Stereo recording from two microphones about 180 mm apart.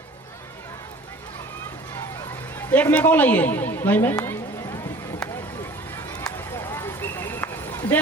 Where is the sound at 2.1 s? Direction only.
10° left (ahead or behind).